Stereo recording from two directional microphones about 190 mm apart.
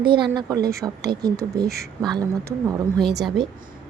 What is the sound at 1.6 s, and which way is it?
Speech, 55° right (ahead or behind).